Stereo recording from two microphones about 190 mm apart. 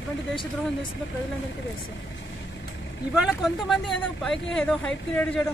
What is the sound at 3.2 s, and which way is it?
Speech, centre (ahead or behind).